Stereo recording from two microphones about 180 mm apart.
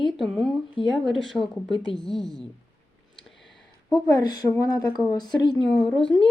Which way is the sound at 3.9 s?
20° left (ahead or behind).